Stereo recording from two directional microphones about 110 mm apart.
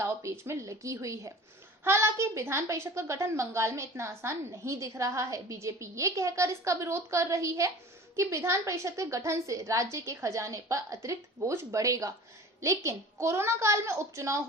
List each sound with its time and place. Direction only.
0.0 s a woman's voice: 25° right (ahead or behind)